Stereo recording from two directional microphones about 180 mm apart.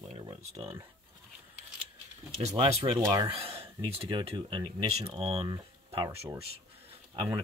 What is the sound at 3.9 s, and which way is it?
Speech, 30° right (ahead or behind).